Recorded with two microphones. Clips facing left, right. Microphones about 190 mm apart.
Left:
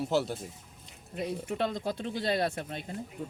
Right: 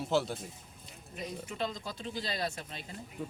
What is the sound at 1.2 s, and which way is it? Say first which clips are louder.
Speech: left 6 dB; 60° left (ahead or behind).